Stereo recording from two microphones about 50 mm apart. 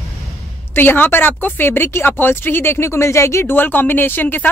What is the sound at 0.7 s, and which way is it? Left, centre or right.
Speech, left.